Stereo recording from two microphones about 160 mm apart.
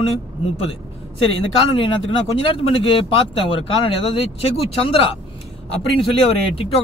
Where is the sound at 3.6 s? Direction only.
35° left (ahead or behind).